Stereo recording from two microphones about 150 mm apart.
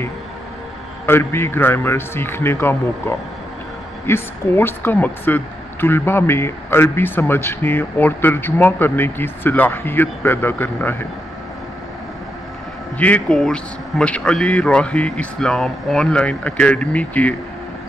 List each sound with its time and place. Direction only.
1.0 s speech: 15° left (ahead or behind)
12.9 s speech: 10° left (ahead or behind)